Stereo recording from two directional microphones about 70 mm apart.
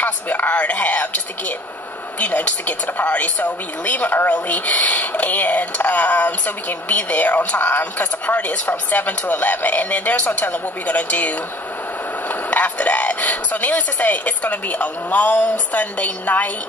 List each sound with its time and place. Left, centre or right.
0.0 s speech: left